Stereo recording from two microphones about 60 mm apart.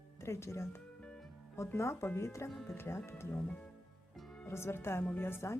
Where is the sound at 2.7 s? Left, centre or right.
Left.